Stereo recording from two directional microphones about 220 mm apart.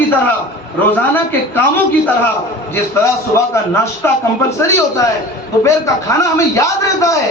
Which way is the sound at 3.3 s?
10° left (ahead or behind).